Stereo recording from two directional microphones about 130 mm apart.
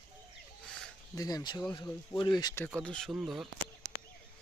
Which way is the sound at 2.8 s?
5° left (ahead or behind).